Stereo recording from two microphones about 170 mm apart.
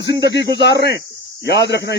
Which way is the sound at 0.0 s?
90° left.